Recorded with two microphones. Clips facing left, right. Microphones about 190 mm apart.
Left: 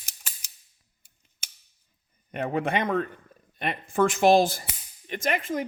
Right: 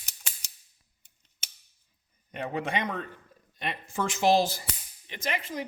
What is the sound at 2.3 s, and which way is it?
A man's voice, 55° left (ahead or behind).